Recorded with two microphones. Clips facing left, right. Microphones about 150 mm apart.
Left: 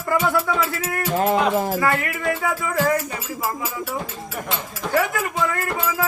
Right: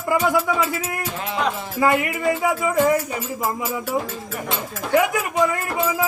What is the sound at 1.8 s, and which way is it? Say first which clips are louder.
Music: right 3 dB; 20° right (ahead or behind).